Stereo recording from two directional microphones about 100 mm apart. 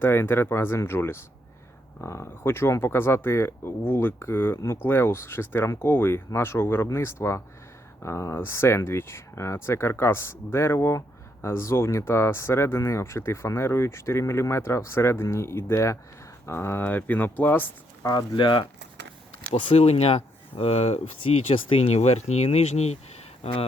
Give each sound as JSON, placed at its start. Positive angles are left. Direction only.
{"t": 0.0, "sound": "speech", "side_deg": 25}
{"t": 18.0, "sound": "speech", "side_deg": 40}
{"t": 19.5, "sound": "speech", "side_deg": 75}